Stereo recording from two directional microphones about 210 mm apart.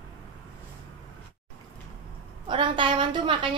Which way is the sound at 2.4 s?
25° right (ahead or behind).